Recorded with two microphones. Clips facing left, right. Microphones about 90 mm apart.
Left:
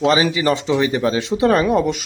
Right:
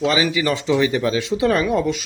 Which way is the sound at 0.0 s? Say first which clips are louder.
Left 3 dB; 30° left (ahead or behind).